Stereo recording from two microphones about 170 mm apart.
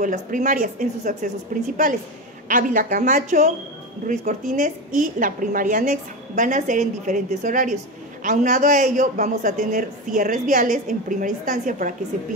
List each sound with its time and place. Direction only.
0.0 s a man's voice: 50° right (ahead or behind)